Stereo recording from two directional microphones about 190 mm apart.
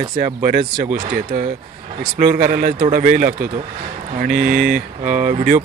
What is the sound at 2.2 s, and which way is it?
Speech, 45° right (ahead or behind).